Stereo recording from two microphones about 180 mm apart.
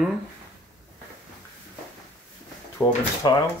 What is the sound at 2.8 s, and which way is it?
Speech, 15° left (ahead or behind).